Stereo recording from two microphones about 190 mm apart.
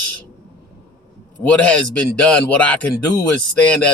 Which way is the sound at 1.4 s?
5° left (ahead or behind).